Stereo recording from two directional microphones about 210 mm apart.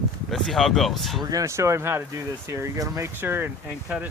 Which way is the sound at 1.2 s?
15° right (ahead or behind).